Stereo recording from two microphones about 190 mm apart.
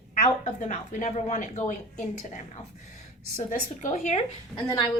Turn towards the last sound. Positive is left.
turn(degrees=25)  # may be behind; listen again after turning